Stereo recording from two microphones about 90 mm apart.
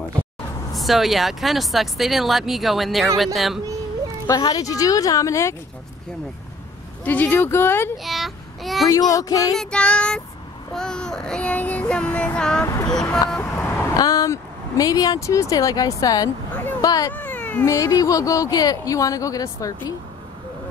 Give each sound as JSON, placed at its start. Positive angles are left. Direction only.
{"t": 0.7, "sound": "speech", "side_deg": 0}
{"t": 4.5, "sound": "speech", "side_deg": 40}
{"t": 7.1, "sound": "speech", "side_deg": 20}
{"t": 8.0, "sound": "a child's voice", "side_deg": 0}
{"t": 8.8, "sound": "speech", "side_deg": 40}
{"t": 9.6, "sound": "child singing", "side_deg": 10}
{"t": 12.6, "sound": "speech", "side_deg": 40}
{"t": 13.4, "sound": "vehicle", "side_deg": 30}
{"t": 14.0, "sound": "speech", "side_deg": 40}
{"t": 17.1, "sound": "cat", "side_deg": 20}
{"t": 17.6, "sound": "speech", "side_deg": 40}